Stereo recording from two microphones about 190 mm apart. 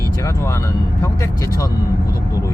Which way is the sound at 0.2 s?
15° left (ahead or behind).